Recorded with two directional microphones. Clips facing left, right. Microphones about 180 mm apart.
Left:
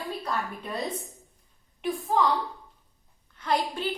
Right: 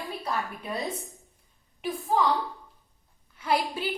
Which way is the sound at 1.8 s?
Centre (ahead or behind).